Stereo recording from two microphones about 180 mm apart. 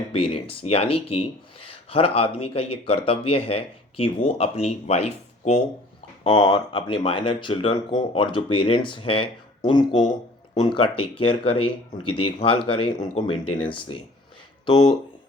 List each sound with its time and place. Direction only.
0.1 s speech: 30° left (ahead or behind)